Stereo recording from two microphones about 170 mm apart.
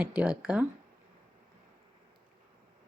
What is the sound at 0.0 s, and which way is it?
Speech, 5° right (ahead or behind).